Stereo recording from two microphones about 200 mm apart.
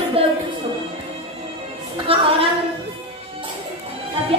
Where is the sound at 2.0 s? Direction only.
30° right (ahead or behind).